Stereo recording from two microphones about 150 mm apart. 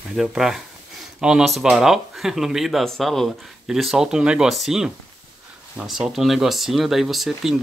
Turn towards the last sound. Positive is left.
turn(degrees=0)  # may be behind; listen again after turning